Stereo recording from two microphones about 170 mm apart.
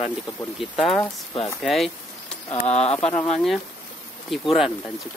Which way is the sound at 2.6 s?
40° left (ahead or behind).